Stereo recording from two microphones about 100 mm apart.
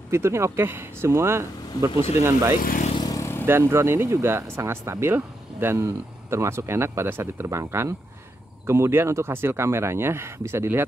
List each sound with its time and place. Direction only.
0.1 s speech: 25° right (ahead or behind)
3.0 s vehicle: 40° left (ahead or behind)
3.4 s speech: 25° right (ahead or behind)